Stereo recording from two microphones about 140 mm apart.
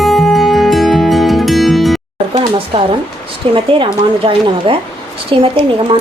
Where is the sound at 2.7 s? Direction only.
35° right (ahead or behind).